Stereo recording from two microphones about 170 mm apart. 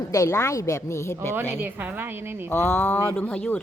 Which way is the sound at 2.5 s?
10° left (ahead or behind).